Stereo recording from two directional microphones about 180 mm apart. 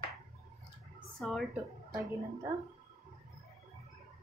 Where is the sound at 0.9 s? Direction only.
Centre (ahead or behind).